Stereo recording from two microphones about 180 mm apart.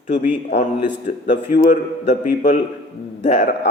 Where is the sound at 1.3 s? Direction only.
45° left (ahead or behind).